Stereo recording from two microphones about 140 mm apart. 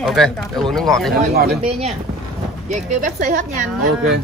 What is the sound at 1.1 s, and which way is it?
Speech, 90° right.